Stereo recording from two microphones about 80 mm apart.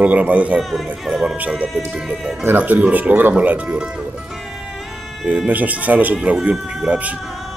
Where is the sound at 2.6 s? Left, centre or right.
Centre.